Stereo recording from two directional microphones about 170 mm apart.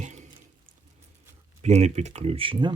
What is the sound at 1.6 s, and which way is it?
Speech, 40° right (ahead or behind).